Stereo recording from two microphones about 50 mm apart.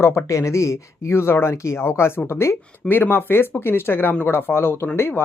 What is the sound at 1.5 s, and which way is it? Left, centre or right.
Speech, left.